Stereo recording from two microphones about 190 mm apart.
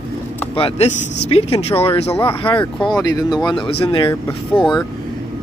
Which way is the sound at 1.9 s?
35° left (ahead or behind).